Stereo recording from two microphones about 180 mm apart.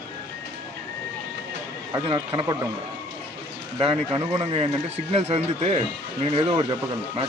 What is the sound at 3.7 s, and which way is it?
Speech, 30° right (ahead or behind).